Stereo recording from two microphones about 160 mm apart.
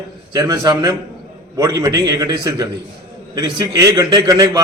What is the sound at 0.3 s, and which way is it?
A man's voice, 20° right (ahead or behind).